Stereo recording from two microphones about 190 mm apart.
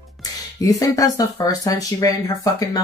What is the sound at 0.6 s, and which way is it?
Speech, 15° left (ahead or behind).